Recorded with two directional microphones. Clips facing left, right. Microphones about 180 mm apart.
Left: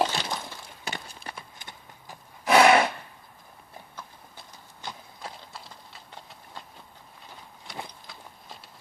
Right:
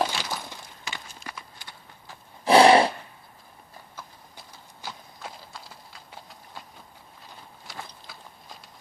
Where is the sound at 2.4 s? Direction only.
30° right (ahead or behind).